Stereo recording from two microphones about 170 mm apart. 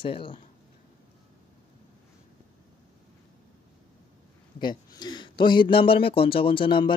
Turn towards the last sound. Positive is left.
turn(degrees=30)  # may be behind; listen again after turning